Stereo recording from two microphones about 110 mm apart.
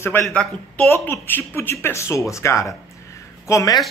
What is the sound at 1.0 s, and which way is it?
A man's voice, 20° left (ahead or behind).